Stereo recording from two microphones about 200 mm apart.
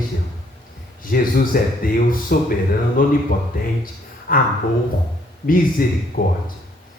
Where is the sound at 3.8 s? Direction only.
45° left (ahead or behind).